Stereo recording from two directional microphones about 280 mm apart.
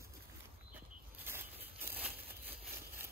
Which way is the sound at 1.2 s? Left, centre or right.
Centre.